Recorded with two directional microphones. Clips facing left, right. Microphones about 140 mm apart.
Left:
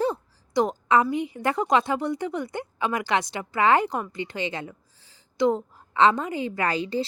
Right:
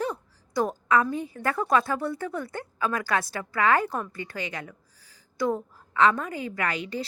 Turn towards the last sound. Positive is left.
turn(degrees=30)  # may be behind; listen again after turning